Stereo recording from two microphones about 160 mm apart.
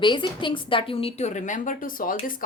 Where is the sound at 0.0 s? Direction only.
30° left (ahead or behind).